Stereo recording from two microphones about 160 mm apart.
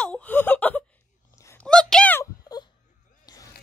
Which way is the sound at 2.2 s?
25° left (ahead or behind).